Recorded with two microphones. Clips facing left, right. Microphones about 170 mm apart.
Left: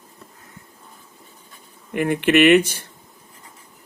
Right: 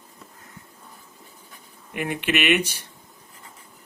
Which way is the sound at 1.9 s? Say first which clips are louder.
Left 9 dB; 50° left (ahead or behind).